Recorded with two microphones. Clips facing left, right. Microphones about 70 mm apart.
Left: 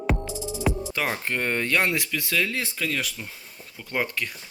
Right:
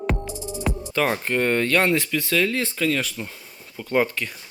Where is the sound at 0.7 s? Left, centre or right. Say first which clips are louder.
Right 4 dB; centre.